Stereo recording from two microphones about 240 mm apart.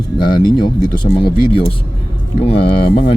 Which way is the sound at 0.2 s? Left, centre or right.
Centre.